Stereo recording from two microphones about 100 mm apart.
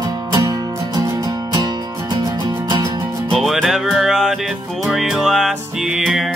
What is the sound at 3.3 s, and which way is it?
Music, centre (ahead or behind).